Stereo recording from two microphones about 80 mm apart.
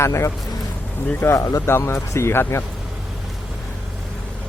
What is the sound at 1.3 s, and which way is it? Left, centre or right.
Speech, left.